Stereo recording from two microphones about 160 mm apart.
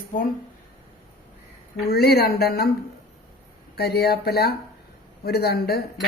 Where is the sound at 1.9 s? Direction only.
75° left (ahead or behind).